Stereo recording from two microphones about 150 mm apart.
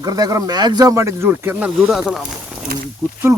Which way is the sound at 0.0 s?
25° right (ahead or behind).